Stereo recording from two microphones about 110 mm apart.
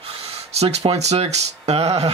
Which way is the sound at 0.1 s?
70° right (ahead or behind).